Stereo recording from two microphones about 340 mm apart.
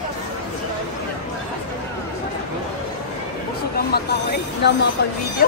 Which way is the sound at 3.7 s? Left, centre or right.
Left.